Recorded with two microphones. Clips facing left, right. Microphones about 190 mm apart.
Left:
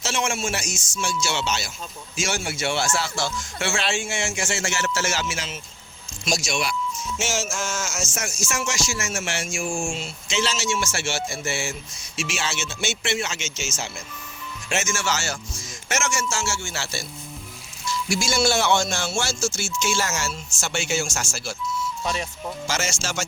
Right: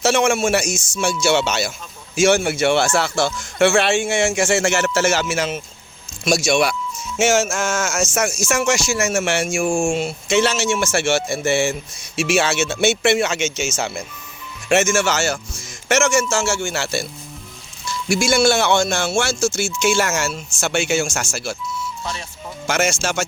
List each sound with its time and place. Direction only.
0.0 s speech: 60° right (ahead or behind)
18.1 s speech: 60° right (ahead or behind)
22.0 s speech: 20° left (ahead or behind)
22.6 s speech: 60° right (ahead or behind)